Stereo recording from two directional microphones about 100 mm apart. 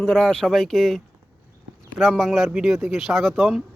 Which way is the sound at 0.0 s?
5° left (ahead or behind).